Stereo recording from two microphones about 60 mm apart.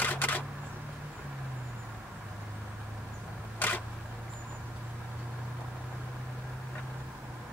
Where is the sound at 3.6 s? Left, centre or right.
Left.